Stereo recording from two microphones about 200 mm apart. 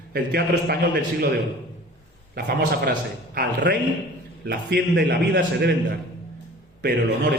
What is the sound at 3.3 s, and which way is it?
A man's voice, 55° right (ahead or behind).